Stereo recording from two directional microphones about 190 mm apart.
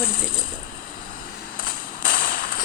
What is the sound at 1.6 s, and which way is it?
Fireworks, 45° left (ahead or behind).